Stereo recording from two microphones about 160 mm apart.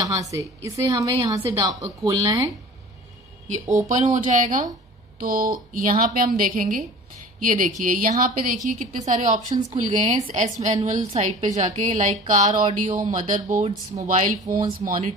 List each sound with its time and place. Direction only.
0.0 s a woman's voice: 20° right (ahead or behind)
3.9 s a woman's voice: 50° right (ahead or behind)
14.4 s a woman's voice: 25° right (ahead or behind)
14.9 s a woman's voice: 60° right (ahead or behind)